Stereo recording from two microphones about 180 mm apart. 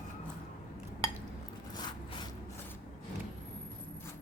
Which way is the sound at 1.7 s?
25° left (ahead or behind).